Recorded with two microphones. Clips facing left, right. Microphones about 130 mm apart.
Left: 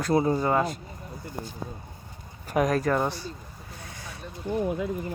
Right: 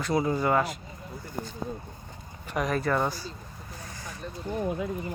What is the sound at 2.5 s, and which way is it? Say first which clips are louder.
Speech: left 4 dB; 45° left (ahead or behind).